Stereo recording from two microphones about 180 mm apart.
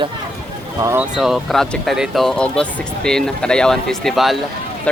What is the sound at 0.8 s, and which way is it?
Speech, 15° right (ahead or behind).